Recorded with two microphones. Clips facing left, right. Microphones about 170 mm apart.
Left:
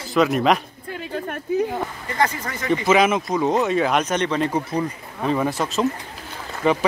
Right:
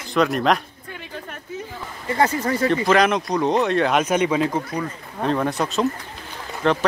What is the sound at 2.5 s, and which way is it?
Speech, 30° right (ahead or behind).